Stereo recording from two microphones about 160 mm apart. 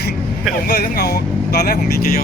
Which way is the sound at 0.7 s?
80° left.